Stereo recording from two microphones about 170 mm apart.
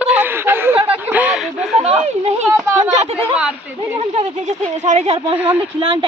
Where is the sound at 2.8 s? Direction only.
40° right (ahead or behind).